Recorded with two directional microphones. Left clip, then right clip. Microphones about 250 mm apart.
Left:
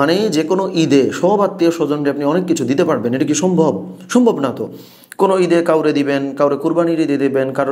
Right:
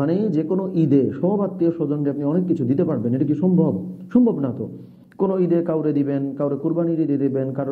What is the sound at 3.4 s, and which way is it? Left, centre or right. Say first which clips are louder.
Speech: left 9 dB; left.